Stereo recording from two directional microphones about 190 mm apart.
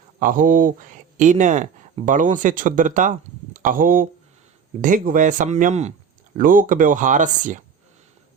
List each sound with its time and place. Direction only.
0.2 s speech: 45° right (ahead or behind)